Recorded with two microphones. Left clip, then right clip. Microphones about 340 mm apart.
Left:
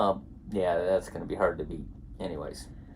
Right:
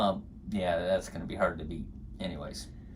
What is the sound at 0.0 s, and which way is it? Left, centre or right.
Speech, centre.